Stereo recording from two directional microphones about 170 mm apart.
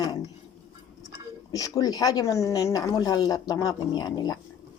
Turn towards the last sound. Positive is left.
turn(degrees=25)  # may be behind; listen again after turning